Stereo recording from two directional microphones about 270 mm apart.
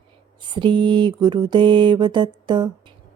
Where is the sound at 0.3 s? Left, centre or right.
Centre.